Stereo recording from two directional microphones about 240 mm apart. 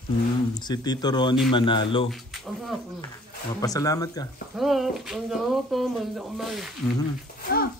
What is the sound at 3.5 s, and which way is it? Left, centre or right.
Speech, centre.